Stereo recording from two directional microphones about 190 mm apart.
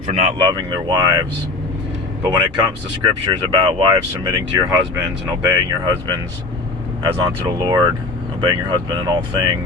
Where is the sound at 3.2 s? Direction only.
25° right (ahead or behind).